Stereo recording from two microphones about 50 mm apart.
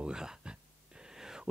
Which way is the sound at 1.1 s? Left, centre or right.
Centre.